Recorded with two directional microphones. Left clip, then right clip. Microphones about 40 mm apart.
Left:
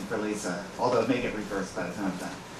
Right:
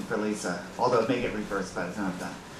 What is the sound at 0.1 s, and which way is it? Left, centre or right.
Speech, right.